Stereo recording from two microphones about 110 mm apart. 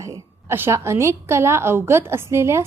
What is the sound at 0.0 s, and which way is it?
A woman's voice, 25° right (ahead or behind).